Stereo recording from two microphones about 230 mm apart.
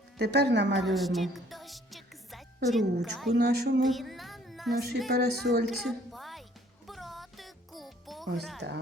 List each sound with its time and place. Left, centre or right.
0.2 s a woman's voice: right
0.9 s music: centre
2.6 s a woman's voice: centre
3.3 s a woman's voice: right
3.8 s speech: centre
5.1 s a woman's voice: right
5.6 s music: centre